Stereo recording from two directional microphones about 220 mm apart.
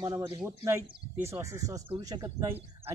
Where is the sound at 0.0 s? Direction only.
20° right (ahead or behind).